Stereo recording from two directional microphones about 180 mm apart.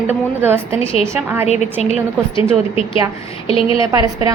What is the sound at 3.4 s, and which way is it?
Speech, 30° left (ahead or behind).